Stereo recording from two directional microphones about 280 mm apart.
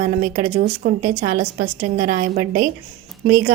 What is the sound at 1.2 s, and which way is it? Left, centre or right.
Speech, right.